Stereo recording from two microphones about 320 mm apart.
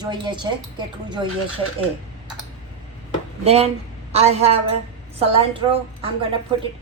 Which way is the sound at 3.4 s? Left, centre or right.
Centre.